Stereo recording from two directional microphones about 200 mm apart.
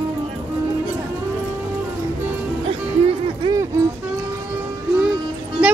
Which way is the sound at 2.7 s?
25° right (ahead or behind).